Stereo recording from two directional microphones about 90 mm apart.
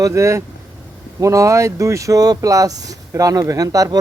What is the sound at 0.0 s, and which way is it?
Speech, 30° right (ahead or behind).